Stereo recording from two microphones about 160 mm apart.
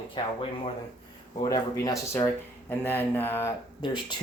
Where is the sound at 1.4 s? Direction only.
20° left (ahead or behind).